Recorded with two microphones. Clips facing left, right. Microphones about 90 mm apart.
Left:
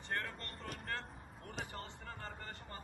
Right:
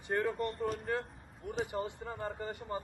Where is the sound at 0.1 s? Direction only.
10° right (ahead or behind).